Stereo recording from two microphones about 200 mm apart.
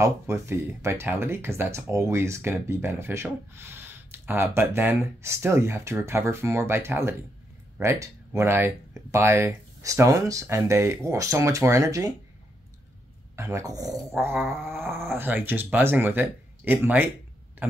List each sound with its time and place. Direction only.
0.0 s speech: 15° right (ahead or behind)
13.4 s speech: 15° right (ahead or behind)